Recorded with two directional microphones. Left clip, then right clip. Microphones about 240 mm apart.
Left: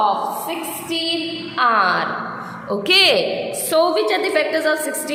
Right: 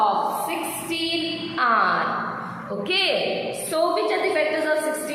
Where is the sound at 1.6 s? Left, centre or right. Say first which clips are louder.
Left 4 dB; left.